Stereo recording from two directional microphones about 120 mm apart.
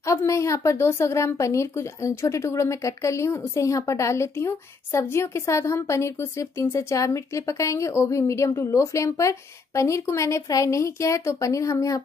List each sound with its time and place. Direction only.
0.0 s a woman's voice: 25° left (ahead or behind)